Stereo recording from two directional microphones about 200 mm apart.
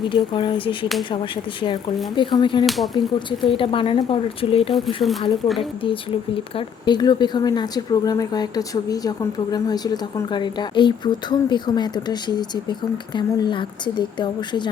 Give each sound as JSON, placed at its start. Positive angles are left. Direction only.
{"t": 0.1, "sound": "a woman's voice", "side_deg": 25}
{"t": 2.6, "sound": "speech", "side_deg": 0}
{"t": 2.9, "sound": "a woman's voice", "side_deg": 25}